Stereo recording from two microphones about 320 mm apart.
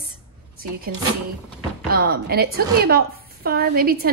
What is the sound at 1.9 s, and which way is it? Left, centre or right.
A woman's voice, right.